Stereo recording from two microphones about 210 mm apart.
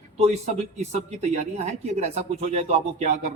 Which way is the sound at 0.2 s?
30° right (ahead or behind).